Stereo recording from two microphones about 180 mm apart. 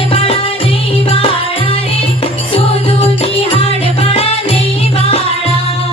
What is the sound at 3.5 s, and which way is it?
Music, 35° left (ahead or behind).